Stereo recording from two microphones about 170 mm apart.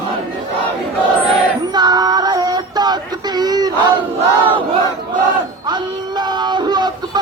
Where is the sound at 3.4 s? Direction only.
20° right (ahead or behind).